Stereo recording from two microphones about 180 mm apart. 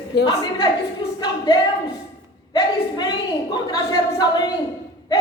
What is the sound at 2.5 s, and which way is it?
A woman's voice, 25° left (ahead or behind).